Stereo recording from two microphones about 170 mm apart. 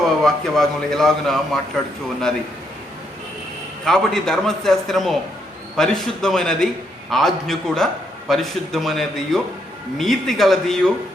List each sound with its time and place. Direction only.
0.2 s a man's voice: centre (ahead or behind)
3.8 s a man's voice: centre (ahead or behind)